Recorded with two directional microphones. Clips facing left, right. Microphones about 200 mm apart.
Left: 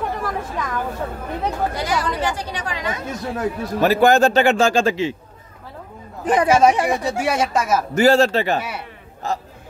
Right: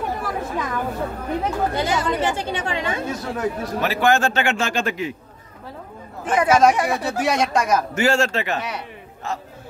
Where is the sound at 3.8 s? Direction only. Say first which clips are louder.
Left 6 dB; 40° left (ahead or behind).